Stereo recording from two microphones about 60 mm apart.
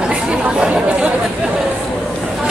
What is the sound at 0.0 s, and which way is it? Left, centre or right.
Chatter, centre.